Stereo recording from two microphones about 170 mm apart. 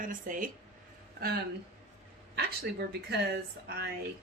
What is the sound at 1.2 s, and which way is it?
A man's voice, 65° right (ahead or behind).